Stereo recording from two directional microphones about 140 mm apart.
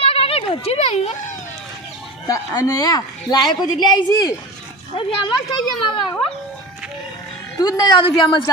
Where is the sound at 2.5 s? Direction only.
25° left (ahead or behind).